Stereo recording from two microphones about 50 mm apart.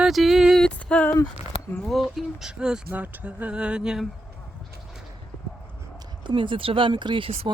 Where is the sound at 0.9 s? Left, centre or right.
Left.